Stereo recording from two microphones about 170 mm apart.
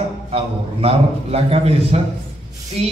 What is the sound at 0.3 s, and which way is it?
A man's voice, 35° right (ahead or behind).